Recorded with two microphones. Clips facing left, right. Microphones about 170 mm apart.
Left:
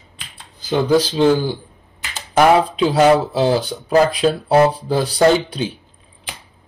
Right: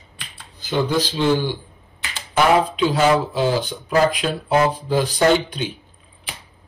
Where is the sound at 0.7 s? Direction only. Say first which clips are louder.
Left 5 dB; 35° left (ahead or behind).